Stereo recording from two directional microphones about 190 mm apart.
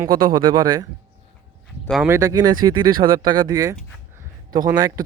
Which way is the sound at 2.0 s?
15° right (ahead or behind).